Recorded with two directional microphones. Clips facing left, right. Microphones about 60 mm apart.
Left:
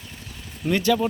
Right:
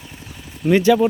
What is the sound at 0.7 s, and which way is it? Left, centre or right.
Speech, centre.